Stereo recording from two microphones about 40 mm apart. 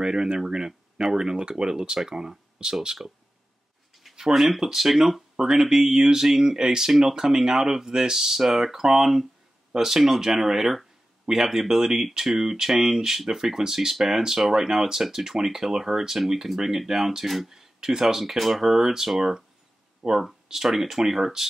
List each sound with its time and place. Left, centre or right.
0.0 s speech: centre
4.3 s speech: centre